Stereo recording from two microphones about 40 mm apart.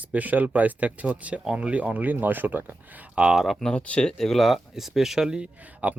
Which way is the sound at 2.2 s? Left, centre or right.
Right.